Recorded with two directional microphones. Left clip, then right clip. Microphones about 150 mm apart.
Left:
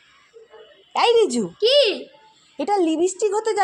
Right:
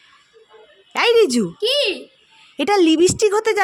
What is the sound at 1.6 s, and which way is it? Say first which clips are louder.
Speech: left 3 dB; 25° right (ahead or behind).